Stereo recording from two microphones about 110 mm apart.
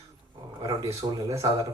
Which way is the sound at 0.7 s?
30° right (ahead or behind).